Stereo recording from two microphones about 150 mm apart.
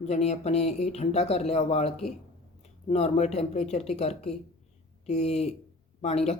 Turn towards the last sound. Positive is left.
turn(degrees=45)  # may be behind; listen again after turning